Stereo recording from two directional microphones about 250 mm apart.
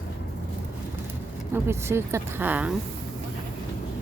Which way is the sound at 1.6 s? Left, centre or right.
Centre.